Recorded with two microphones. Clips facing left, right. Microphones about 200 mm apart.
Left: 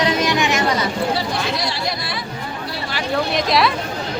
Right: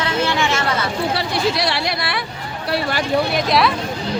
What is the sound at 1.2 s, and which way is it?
Chatter, 70° right (ahead or behind).